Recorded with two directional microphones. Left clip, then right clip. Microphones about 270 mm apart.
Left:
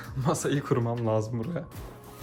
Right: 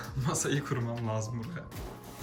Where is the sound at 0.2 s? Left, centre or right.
Centre.